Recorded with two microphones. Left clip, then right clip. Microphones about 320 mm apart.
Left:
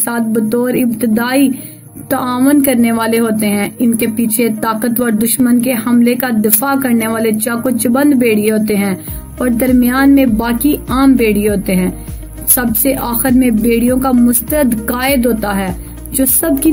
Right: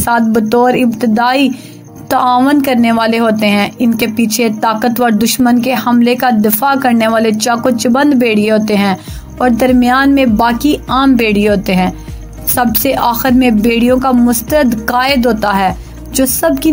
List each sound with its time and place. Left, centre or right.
0.0 s a woman's voice: centre